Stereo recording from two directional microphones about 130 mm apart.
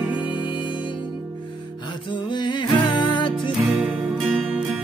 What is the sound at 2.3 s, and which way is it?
Music, 35° left (ahead or behind).